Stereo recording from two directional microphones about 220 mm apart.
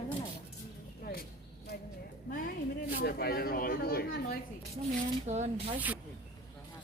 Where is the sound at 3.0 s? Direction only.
45° left (ahead or behind).